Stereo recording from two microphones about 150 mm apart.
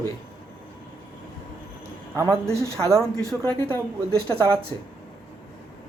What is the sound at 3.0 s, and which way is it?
Speech, 10° left (ahead or behind).